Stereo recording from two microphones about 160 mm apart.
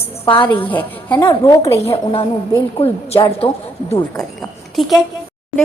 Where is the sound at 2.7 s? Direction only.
35° left (ahead or behind).